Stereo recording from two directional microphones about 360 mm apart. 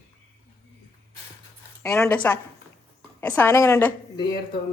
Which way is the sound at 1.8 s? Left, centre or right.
Centre.